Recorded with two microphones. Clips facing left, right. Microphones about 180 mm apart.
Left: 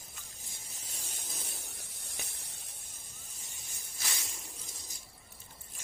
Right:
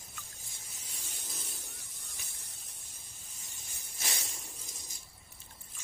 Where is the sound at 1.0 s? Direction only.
50° left (ahead or behind).